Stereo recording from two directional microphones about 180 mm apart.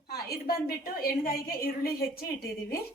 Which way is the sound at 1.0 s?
55° left (ahead or behind).